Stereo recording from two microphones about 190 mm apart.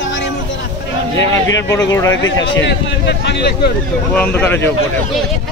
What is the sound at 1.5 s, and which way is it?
Speech, 20° left (ahead or behind).